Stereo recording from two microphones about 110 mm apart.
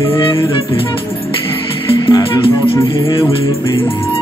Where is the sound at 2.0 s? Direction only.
40° left (ahead or behind).